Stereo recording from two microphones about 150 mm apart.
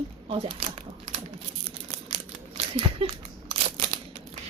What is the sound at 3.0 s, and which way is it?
Speech, 40° right (ahead or behind).